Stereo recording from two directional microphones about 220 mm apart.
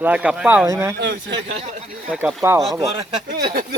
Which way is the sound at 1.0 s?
50° right (ahead or behind).